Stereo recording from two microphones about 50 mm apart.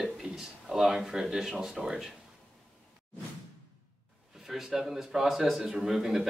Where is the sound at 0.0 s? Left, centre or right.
Centre.